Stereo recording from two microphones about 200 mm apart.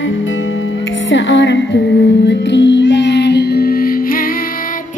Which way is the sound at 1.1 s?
65° left (ahead or behind).